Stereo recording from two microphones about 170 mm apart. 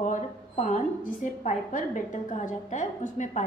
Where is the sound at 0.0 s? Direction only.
45° left (ahead or behind).